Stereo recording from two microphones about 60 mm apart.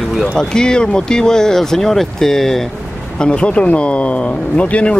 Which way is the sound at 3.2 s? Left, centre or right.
Centre.